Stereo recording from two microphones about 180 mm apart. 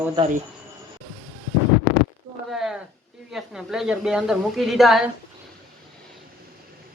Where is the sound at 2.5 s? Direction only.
Centre (ahead or behind).